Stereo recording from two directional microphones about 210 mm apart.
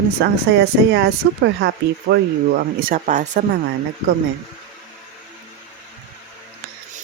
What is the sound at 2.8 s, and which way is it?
Speech, 40° right (ahead or behind).